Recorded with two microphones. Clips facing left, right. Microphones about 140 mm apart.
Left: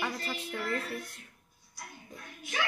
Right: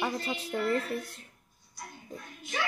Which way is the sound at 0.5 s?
25° right (ahead or behind).